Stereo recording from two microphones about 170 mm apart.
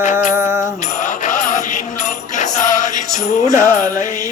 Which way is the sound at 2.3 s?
45° left (ahead or behind).